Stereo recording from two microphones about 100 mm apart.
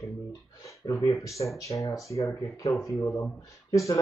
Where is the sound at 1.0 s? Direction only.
30° left (ahead or behind).